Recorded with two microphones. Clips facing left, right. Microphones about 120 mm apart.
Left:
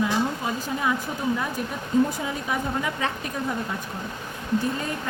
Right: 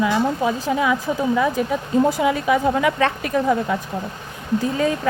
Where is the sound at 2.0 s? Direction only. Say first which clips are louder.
Right 9 dB; 85° right.